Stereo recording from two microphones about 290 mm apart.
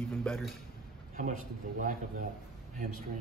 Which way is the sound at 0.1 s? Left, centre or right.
Centre.